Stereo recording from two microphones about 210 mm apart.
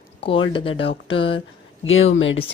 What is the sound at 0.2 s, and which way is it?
Speech, 25° left (ahead or behind).